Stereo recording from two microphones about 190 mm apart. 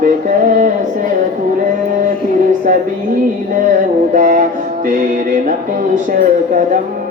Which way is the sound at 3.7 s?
40° right (ahead or behind).